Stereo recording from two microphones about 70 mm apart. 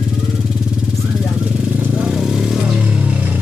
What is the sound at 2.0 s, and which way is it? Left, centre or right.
Vehicle, centre.